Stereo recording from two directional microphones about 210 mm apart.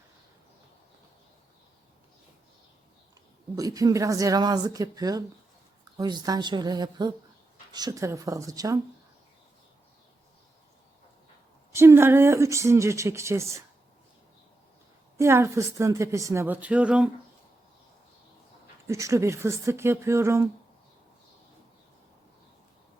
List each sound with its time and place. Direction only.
3.5 s a woman's voice: 15° right (ahead or behind)
11.7 s a woman's voice: 10° right (ahead or behind)
15.2 s a woman's voice: 10° right (ahead or behind)
18.9 s a woman's voice: 15° right (ahead or behind)